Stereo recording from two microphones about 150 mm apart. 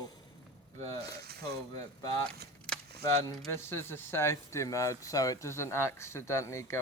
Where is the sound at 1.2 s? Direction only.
90° right.